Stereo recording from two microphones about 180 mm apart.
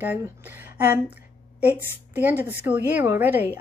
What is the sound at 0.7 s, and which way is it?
Speech, 10° right (ahead or behind).